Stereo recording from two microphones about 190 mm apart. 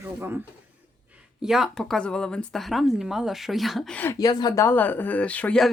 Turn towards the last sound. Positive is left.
turn(degrees=5)  # may be behind; listen again after turning